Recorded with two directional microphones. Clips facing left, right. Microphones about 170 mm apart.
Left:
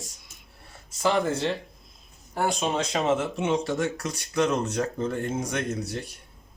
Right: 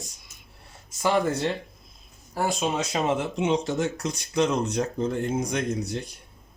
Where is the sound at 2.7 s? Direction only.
10° right (ahead or behind).